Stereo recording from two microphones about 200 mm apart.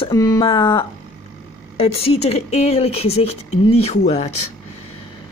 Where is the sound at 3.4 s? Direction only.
90° left.